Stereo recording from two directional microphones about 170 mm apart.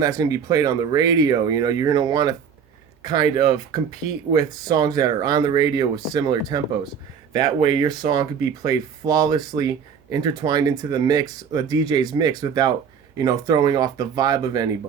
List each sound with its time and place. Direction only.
0.0 s speech: 20° right (ahead or behind)
7.8 s speech: 25° right (ahead or behind)